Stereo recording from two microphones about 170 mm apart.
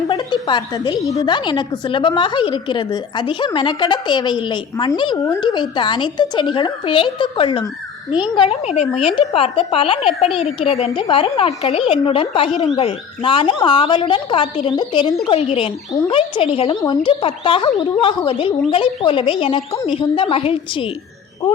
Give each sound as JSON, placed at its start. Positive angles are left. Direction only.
{"t": 0.1, "sound": "a woman's voice", "side_deg": 25}